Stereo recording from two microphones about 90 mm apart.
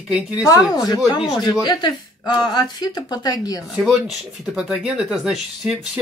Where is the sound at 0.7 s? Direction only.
45° left (ahead or behind).